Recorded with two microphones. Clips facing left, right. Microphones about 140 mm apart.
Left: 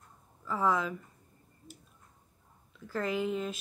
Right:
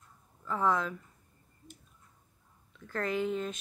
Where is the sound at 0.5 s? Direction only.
5° left (ahead or behind).